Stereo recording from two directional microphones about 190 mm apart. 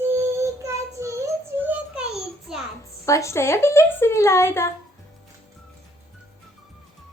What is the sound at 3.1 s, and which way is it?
A woman's voice, 15° left (ahead or behind).